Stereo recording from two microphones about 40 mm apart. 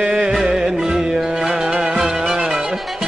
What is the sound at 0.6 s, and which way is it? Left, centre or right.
Music, centre.